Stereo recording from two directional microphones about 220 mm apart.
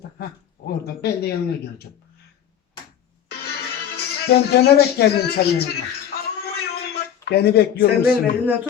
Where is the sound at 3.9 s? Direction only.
45° left (ahead or behind).